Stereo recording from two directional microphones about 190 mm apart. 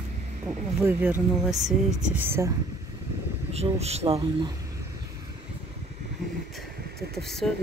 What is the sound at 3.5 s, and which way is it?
Speech, 35° right (ahead or behind).